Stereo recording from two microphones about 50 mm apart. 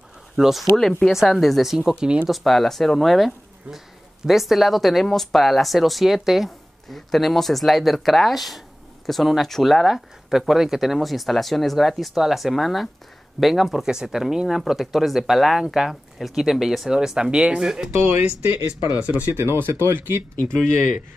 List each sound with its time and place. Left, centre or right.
0.4 s speech: centre
2.0 s speech: centre
2.2 s speech: centre
17.9 s speech: right
19.3 s speech: right
20.4 s speech: centre